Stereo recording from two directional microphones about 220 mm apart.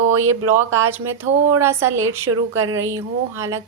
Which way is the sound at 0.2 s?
80° right.